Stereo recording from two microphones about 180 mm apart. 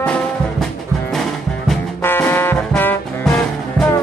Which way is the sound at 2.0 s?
10° left (ahead or behind).